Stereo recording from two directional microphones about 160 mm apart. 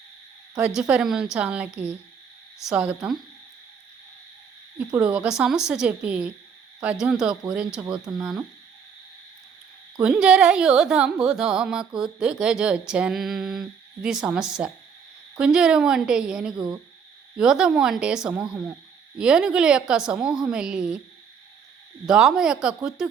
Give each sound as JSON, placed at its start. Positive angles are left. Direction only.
{"t": 0.5, "sound": "speech", "side_deg": -5}
{"t": 4.9, "sound": "speech", "side_deg": -5}
{"t": 7.9, "sound": "speech", "side_deg": -25}
{"t": 8.2, "sound": "speech", "side_deg": -5}
{"t": 10.0, "sound": "speech", "side_deg": -5}
{"t": 16.6, "sound": "speech", "side_deg": -25}
{"t": 17.3, "sound": "speech", "side_deg": -5}
{"t": 22.0, "sound": "speech", "side_deg": -5}